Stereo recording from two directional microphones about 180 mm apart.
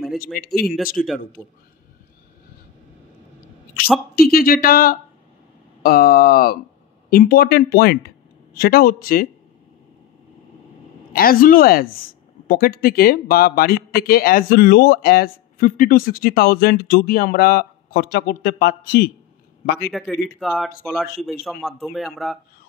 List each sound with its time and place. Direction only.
0.2 s speech: 55° left (ahead or behind)
1.0 s speech: centre (ahead or behind)
4.3 s speech: 55° left (ahead or behind)
11.1 s a man's voice: 55° left (ahead or behind)
19.9 s speech: centre (ahead or behind)